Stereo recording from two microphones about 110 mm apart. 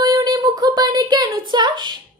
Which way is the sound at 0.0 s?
40° right (ahead or behind).